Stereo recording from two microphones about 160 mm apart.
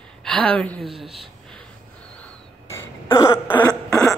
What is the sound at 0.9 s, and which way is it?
Speech, 35° right (ahead or behind).